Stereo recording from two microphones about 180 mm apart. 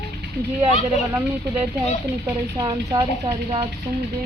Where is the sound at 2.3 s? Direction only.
20° right (ahead or behind).